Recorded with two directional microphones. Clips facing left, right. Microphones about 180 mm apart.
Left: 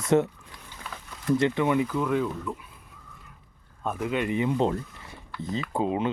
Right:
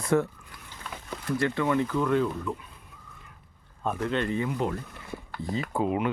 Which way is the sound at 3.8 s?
5° left (ahead or behind).